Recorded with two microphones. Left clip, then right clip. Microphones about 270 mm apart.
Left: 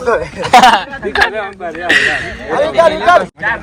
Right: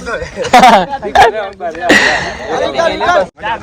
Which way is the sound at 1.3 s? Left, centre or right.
Centre.